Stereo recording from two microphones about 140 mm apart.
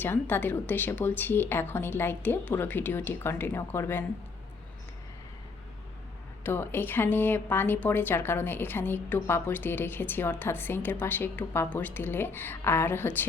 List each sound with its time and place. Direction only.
0.0 s speech: 15° left (ahead or behind)
6.4 s speech: 15° left (ahead or behind)